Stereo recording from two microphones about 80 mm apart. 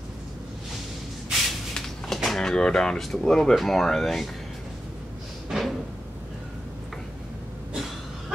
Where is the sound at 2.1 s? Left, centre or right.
Centre.